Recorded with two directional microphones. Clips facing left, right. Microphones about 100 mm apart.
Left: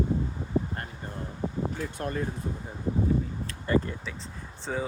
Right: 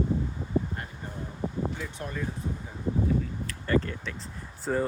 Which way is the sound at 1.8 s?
50° left (ahead or behind).